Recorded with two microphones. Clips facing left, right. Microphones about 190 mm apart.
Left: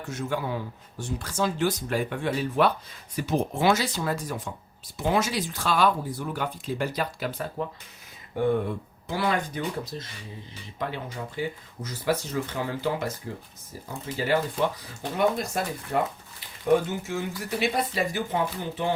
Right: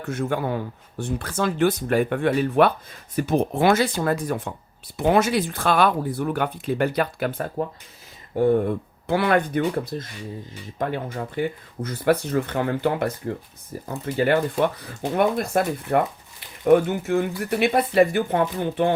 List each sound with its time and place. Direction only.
0.0 s speech: 55° right (ahead or behind)
8.4 s speech: 40° right (ahead or behind)
9.0 s speech: 60° right (ahead or behind)